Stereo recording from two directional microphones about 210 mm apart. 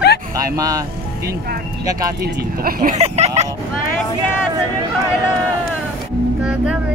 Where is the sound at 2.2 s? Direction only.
45° right (ahead or behind).